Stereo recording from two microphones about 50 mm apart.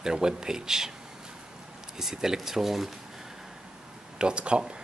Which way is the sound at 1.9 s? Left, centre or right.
Centre.